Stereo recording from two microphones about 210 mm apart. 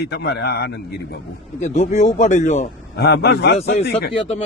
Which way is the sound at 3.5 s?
30° left (ahead or behind).